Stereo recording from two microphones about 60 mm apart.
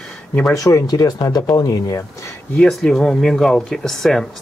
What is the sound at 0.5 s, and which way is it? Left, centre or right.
Speech, left.